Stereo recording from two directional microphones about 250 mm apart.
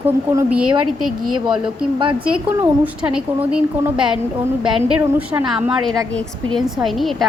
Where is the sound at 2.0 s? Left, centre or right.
Centre.